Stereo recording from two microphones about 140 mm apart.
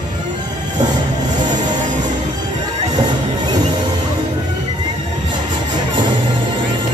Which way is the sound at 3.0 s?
30° right (ahead or behind).